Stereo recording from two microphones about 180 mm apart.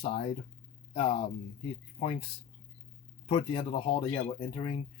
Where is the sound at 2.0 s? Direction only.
35° left (ahead or behind).